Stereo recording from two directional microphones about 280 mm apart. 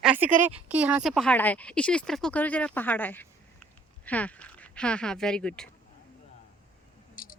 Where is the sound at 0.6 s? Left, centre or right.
Centre.